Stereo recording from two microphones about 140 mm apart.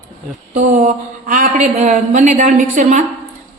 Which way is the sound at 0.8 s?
75° right (ahead or behind).